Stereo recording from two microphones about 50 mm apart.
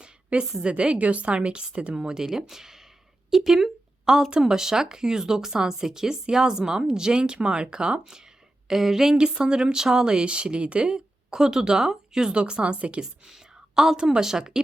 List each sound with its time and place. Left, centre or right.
0.0 s a sound: right
0.6 s a woman's voice: right
8.6 s speech: centre
13.2 s a woman's voice: centre